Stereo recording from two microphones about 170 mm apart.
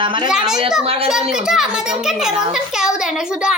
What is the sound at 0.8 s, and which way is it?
Speech, 35° right (ahead or behind).